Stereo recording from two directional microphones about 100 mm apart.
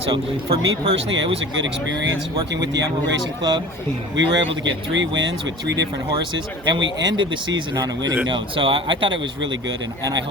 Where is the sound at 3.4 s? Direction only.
50° right (ahead or behind).